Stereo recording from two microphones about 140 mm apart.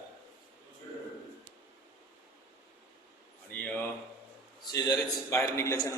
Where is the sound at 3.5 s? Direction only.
10° left (ahead or behind).